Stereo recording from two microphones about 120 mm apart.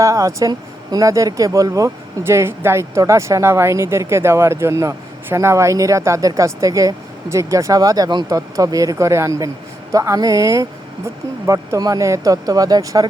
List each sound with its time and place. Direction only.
0.0 s speech: 25° right (ahead or behind)